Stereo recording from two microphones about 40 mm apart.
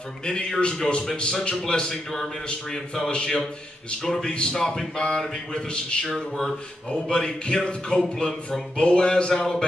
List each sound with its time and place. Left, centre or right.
0.2 s speech: left
4.3 s speech: left